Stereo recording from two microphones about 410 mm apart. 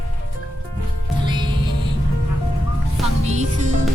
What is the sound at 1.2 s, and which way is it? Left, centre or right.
Music, centre.